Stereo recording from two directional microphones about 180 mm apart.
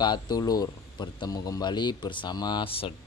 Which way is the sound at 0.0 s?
25° left (ahead or behind).